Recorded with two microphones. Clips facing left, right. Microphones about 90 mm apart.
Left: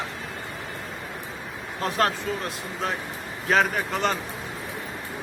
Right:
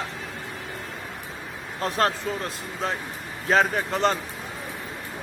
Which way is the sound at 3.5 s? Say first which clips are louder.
Right 1 dB; 35° right (ahead or behind).